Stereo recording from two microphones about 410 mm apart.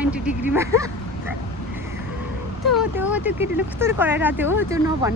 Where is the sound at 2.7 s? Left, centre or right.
Centre.